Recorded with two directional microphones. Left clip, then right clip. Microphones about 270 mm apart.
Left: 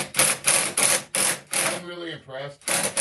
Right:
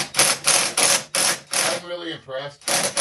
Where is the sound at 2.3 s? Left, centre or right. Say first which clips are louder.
Right 4 dB; centre.